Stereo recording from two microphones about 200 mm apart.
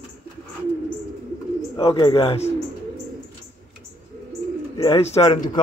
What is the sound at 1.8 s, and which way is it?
Speech, 25° left (ahead or behind).